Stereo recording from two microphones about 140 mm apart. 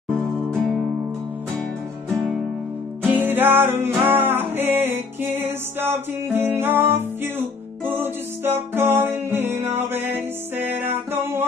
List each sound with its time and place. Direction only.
0.5 s music: centre (ahead or behind)
3.1 s music: 15° right (ahead or behind)